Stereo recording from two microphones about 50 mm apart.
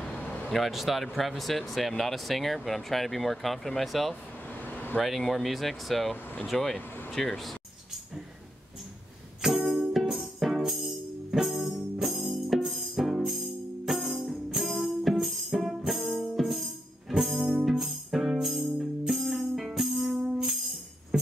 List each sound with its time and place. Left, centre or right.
0.0 s a sound: centre
0.5 s speech: centre
4.1 s vehicle: left
5.0 s speech: centre
7.1 s a sound: centre
9.4 s music: centre
18.4 s music: centre
21.1 s music: centre